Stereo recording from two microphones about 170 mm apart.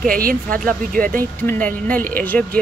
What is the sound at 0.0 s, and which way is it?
Speech, 55° right (ahead or behind).